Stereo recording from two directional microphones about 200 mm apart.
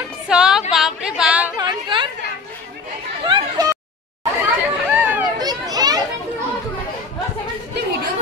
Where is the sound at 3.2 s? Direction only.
20° right (ahead or behind).